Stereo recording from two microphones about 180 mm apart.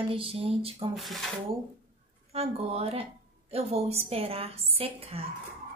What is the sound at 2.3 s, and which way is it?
A woman's voice, 35° right (ahead or behind).